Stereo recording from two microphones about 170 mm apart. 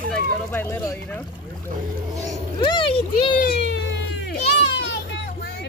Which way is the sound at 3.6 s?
90° left.